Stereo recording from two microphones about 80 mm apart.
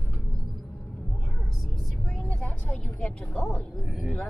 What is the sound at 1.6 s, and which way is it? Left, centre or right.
Vehicle, centre.